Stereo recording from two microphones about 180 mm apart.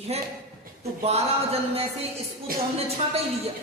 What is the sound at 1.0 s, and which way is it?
Speech, 35° right (ahead or behind).